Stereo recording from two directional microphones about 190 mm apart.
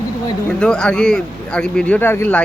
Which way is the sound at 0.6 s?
5° left (ahead or behind).